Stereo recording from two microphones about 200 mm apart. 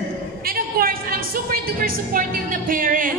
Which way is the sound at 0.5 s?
45° right (ahead or behind).